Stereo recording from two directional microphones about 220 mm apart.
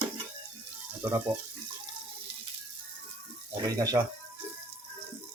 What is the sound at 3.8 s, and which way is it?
Speech, 15° right (ahead or behind).